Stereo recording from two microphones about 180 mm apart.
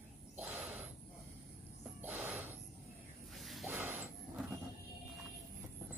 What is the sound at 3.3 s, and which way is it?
Snake, centre (ahead or behind).